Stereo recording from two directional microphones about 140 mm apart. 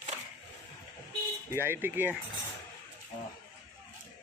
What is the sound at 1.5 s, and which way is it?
Speech, 15° right (ahead or behind).